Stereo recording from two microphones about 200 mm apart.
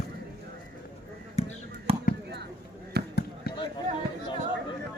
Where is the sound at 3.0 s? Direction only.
55° right (ahead or behind).